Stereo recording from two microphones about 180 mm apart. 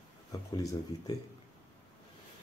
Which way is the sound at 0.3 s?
20° left (ahead or behind).